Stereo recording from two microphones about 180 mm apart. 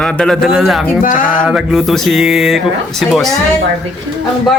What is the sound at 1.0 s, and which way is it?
Speech, 45° left (ahead or behind).